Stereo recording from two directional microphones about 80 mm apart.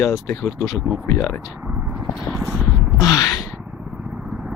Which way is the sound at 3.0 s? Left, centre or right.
Left.